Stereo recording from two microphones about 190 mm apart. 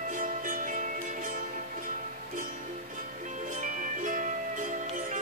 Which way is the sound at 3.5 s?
45° right (ahead or behind).